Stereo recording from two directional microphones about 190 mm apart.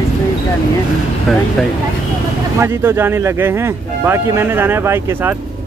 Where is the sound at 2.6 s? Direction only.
10° right (ahead or behind).